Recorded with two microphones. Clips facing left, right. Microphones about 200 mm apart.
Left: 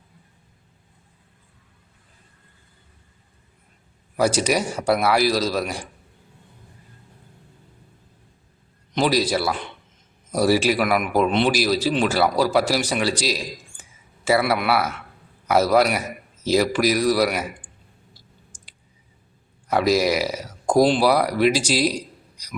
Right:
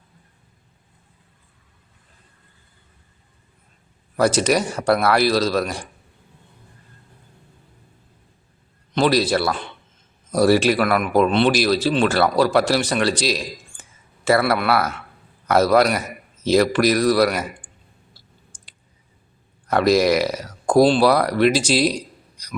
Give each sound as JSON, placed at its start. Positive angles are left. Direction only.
{"t": 4.2, "sound": "speech", "side_deg": 10}
{"t": 9.0, "sound": "speech", "side_deg": 10}
{"t": 19.6, "sound": "speech", "side_deg": 10}